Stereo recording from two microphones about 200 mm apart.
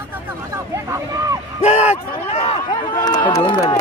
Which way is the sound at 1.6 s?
35° left (ahead or behind).